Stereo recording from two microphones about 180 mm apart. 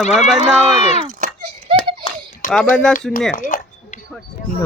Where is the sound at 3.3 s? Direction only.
50° left (ahead or behind).